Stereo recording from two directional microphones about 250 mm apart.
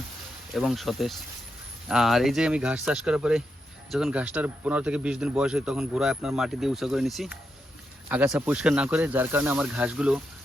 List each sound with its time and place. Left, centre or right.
0.5 s speech: centre